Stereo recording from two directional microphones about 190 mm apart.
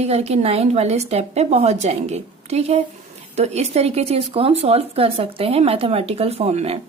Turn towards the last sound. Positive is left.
turn(degrees=-35)  # may be behind; listen again after turning